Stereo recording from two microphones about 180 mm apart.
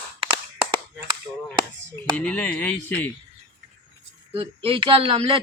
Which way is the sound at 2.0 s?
10° left (ahead or behind).